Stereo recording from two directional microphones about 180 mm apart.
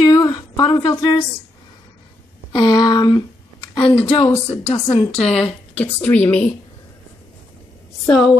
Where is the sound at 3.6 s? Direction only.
25° left (ahead or behind).